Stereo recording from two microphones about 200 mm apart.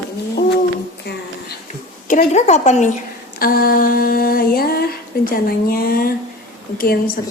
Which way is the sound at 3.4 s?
45° left (ahead or behind).